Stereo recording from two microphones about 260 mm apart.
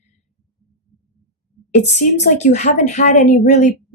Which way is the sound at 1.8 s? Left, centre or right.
Left.